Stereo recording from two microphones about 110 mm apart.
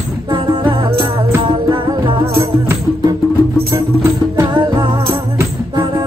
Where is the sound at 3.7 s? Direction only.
25° right (ahead or behind).